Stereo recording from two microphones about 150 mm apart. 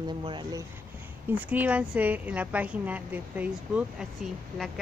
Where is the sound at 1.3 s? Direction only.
10° right (ahead or behind).